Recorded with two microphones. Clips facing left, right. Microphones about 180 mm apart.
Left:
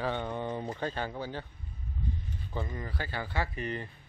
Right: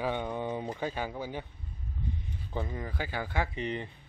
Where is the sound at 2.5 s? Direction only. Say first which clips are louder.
Right 2 dB; 10° right (ahead or behind).